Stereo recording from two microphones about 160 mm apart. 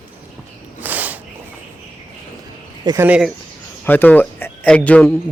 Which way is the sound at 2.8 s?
20° right (ahead or behind).